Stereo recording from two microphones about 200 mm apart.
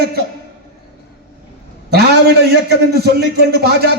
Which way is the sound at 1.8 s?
55° right (ahead or behind).